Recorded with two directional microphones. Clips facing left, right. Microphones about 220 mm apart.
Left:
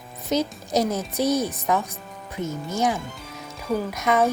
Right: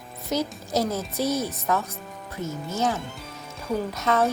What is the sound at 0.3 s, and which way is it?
A woman's voice, 20° left (ahead or behind).